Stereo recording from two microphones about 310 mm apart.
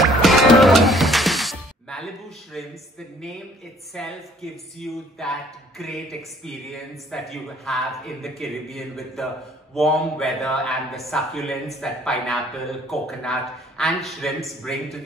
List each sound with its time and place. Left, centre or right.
0.0 s music: centre
2.5 s speech: centre
3.9 s speech: centre